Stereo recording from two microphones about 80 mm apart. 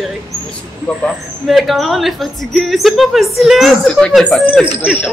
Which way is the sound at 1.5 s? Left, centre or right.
Centre.